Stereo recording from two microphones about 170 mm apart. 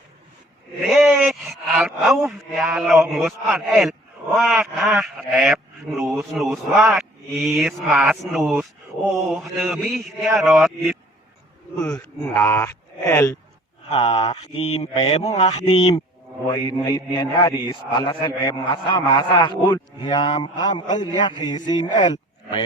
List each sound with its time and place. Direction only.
0.9 s speech: centre (ahead or behind)
12.2 s speech: 10° left (ahead or behind)
13.9 s speech: 35° left (ahead or behind)
16.8 s a man's voice: 20° left (ahead or behind)